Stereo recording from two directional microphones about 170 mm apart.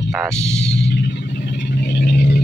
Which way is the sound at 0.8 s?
90° left.